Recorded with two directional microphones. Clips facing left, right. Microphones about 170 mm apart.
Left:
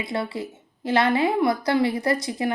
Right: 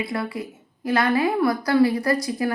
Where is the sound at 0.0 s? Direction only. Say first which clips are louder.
Even; 25° left (ahead or behind).